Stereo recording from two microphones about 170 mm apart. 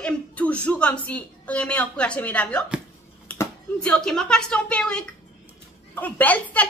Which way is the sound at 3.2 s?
15° left (ahead or behind).